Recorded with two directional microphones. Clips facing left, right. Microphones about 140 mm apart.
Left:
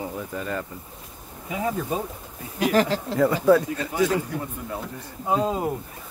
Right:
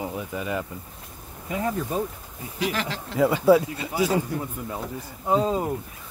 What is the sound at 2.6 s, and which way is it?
Speech, 40° left (ahead or behind).